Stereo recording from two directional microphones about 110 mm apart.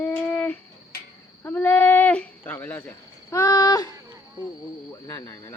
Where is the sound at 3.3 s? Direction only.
30° left (ahead or behind).